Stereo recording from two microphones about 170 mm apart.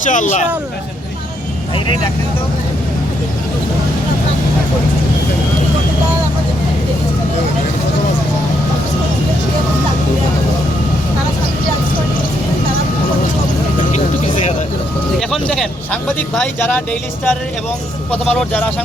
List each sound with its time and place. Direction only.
0.0 s speech: 50° left (ahead or behind)
15.2 s speech: centre (ahead or behind)